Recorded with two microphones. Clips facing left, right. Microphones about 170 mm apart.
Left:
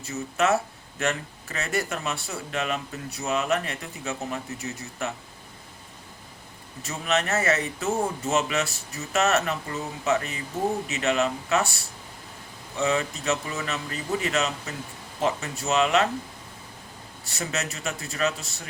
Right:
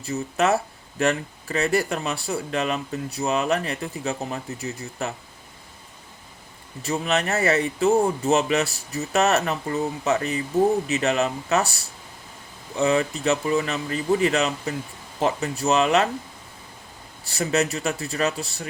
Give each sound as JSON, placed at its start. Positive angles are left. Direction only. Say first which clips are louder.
{"t": 0.0, "sound": "speech", "louder": "right 3 dB", "side_deg": -35}
{"t": 6.8, "sound": "speech", "louder": "right 3 dB", "side_deg": -35}
{"t": 17.2, "sound": "speech", "louder": "right 8 dB", "side_deg": -35}